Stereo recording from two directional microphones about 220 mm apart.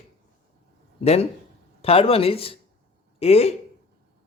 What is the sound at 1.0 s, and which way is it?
Speech, 30° left (ahead or behind).